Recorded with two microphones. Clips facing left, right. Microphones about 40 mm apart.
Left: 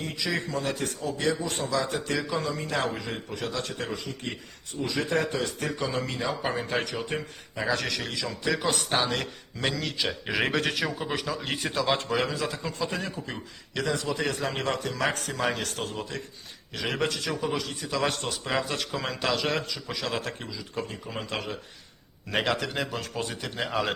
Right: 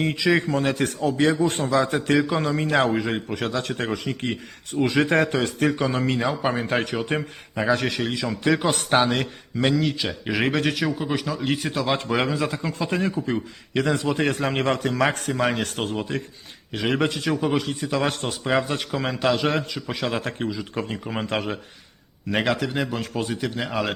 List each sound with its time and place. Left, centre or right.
0.3 s a man's voice: right
7.6 s speech: right
8.3 s a man's voice: right
8.7 s a man's voice: right
9.0 s speech: right
9.6 s a man's voice: centre
12.0 s a man's voice: right
14.9 s a man's voice: right
16.7 s a man's voice: centre
17.1 s a man's voice: right
18.2 s a man's voice: right
19.7 s a man's voice: right
22.3 s a man's voice: centre